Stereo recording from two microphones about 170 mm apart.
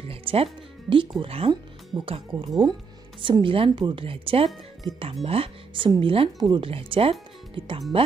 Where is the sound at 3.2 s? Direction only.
30° right (ahead or behind).